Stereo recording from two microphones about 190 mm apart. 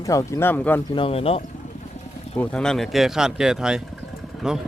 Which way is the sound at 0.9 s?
30° left (ahead or behind).